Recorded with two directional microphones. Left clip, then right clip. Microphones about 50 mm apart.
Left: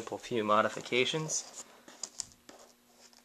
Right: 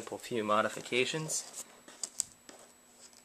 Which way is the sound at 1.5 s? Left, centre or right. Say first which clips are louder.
Right 1 dB; right.